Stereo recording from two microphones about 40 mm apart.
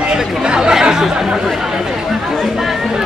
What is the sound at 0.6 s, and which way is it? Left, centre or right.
Chatter, centre.